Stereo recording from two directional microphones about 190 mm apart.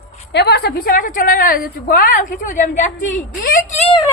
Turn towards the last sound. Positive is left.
turn(degrees=35)  # may be behind; listen again after turning